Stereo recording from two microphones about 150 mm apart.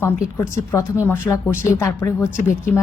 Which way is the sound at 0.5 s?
15° left (ahead or behind).